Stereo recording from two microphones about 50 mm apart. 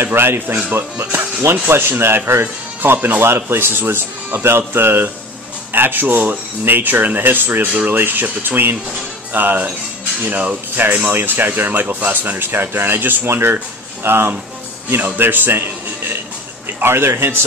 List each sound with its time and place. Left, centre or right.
0.0 s speech: right
2.4 s speech: right